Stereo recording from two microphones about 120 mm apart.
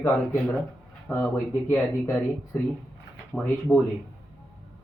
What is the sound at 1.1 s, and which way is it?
Speech, 20° left (ahead or behind).